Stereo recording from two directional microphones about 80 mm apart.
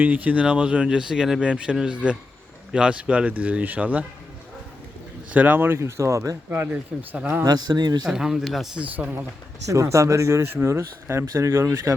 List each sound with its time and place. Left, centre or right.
0.0 s speech: right
5.3 s speech: centre; by 6.7 s right
7.1 s speech: right
7.4 s speech: right
8.0 s speech: centre
8.8 s speech: centre
9.6 s speech: right